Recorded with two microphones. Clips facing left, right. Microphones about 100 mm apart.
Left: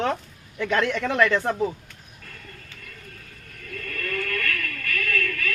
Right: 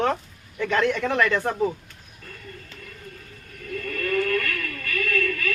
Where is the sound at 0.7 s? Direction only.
15° right (ahead or behind).